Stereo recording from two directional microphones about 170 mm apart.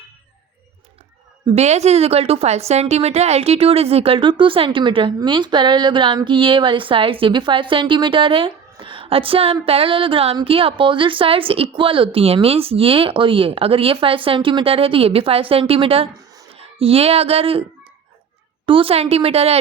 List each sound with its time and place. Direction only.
1.5 s a woman's voice: 40° right (ahead or behind)
16.6 s a sound: 35° right (ahead or behind)
18.6 s a woman's voice: 30° right (ahead or behind)